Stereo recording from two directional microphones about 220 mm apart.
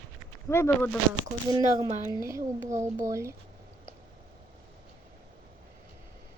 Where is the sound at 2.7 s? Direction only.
35° right (ahead or behind).